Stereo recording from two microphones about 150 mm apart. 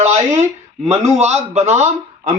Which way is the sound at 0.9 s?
50° right (ahead or behind).